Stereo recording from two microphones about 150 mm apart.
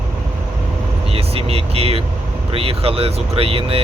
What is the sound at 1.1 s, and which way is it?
Speech, 40° right (ahead or behind).